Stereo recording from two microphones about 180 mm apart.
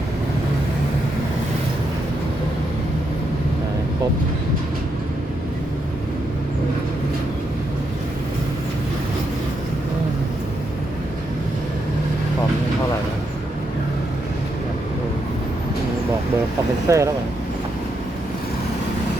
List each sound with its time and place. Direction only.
16.9 s speech: 15° right (ahead or behind)